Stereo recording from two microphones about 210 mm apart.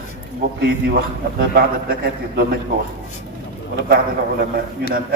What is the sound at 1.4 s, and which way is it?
A man's voice, 45° right (ahead or behind).